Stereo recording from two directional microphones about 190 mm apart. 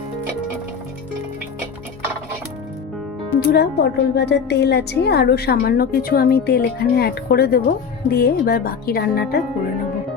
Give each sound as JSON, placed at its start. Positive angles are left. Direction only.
{"t": 3.5, "sound": "a woman's voice", "side_deg": 55}